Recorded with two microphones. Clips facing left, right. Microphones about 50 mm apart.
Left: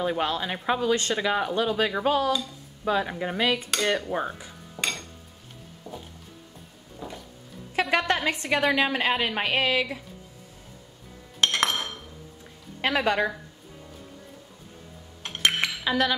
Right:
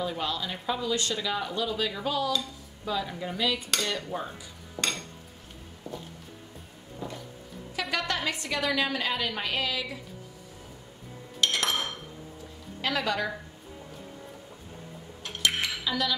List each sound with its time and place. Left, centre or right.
0.0 s speech: left
4.8 s a sound: centre
5.9 s music: centre
7.0 s a sound: centre
7.7 s a woman's voice: left
11.4 s dishes: left
12.8 s a woman's voice: left
15.2 s dishes: left